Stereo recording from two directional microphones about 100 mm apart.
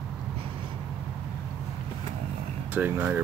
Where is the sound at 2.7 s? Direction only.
15° right (ahead or behind).